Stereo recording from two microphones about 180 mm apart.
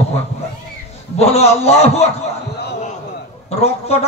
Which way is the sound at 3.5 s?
35° left (ahead or behind).